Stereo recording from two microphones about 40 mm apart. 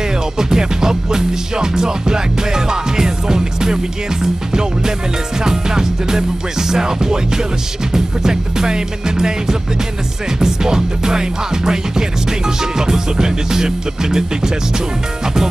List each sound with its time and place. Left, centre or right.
0.4 s music: centre